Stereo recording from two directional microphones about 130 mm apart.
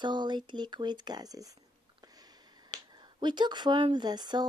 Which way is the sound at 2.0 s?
30° right (ahead or behind).